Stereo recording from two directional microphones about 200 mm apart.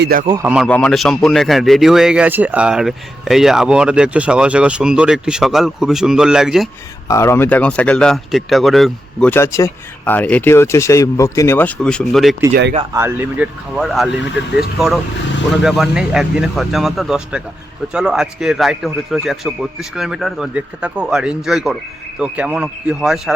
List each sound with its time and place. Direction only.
0.0 s speech: 45° right (ahead or behind)
0.4 s speech: 5° right (ahead or behind)
7.1 s speech: 15° left (ahead or behind)
9.3 s speech: 15° left (ahead or behind)
12.9 s speech: 10° right (ahead or behind)